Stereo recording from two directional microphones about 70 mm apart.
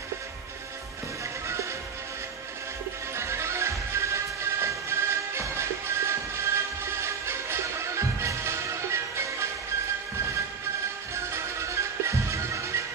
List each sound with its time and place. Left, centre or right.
3.2 s music: right
11.1 s music: right